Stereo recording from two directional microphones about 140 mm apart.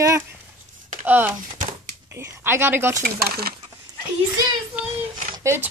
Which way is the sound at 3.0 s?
90° right.